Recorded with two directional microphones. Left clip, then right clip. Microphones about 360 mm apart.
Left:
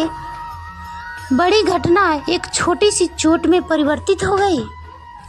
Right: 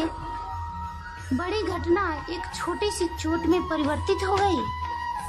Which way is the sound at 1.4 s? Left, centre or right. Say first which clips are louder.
Left 14 dB; centre.